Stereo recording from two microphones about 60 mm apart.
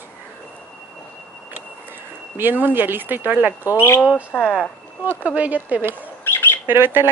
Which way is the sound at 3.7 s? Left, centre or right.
Left.